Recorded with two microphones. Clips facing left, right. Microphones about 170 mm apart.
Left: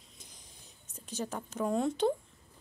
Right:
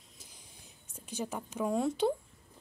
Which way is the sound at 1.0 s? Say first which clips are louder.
Even; 10° right (ahead or behind).